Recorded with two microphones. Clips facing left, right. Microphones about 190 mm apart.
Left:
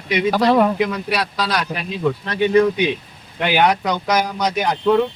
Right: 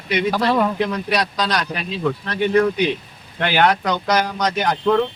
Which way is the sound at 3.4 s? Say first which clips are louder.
Left 1 dB; 10° left (ahead or behind).